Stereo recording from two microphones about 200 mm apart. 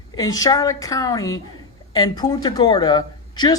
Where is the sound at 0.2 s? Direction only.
15° left (ahead or behind).